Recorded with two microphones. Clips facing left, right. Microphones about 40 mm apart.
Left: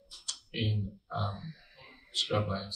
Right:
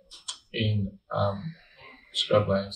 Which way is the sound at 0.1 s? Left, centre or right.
Right.